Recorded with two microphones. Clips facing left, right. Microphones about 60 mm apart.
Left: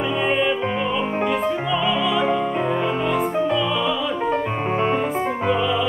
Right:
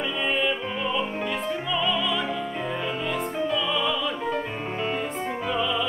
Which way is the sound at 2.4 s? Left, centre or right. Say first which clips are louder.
Left 8 dB; left.